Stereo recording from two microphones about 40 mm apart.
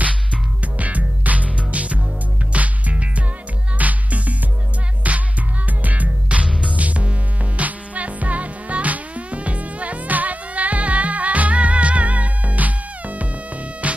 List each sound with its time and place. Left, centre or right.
0.7 s music: right